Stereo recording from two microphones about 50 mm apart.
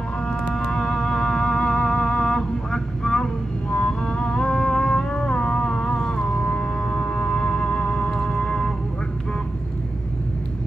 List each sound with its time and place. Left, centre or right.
0.6 s music: centre